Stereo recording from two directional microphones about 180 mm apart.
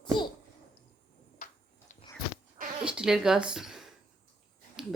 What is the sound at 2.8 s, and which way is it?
Speech, 5° right (ahead or behind).